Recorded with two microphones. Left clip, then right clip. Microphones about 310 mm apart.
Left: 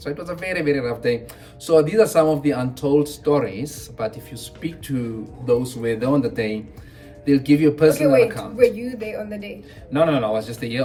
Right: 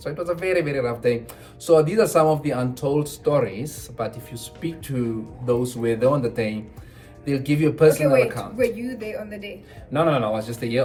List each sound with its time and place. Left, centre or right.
0.0 s speech: centre
5.8 s speech: centre
8.0 s a woman's voice: centre
9.9 s speech: centre